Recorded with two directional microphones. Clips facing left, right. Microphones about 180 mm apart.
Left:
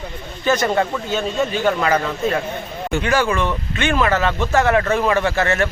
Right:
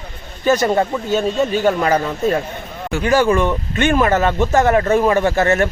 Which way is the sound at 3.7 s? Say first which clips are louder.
Right 3 dB; 45° right (ahead or behind).